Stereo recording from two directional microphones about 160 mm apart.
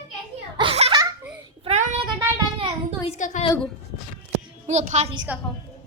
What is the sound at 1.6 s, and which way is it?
Speech, 50° right (ahead or behind).